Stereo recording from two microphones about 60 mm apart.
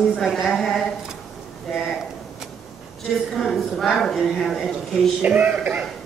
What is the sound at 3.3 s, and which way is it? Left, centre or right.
A woman's voice, centre.